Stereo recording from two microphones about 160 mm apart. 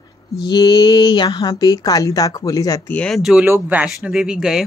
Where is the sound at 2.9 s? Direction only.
10° left (ahead or behind).